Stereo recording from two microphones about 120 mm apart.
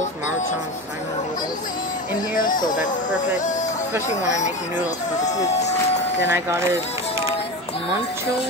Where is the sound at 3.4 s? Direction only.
90° left.